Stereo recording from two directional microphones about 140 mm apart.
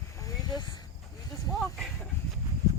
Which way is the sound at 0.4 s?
30° left (ahead or behind).